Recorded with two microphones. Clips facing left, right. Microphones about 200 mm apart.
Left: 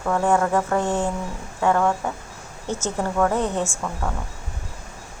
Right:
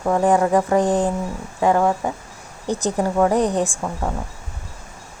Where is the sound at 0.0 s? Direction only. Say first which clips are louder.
Right 3 dB; 20° right (ahead or behind).